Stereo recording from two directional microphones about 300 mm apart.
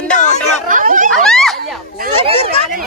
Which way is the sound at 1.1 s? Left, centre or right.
Centre.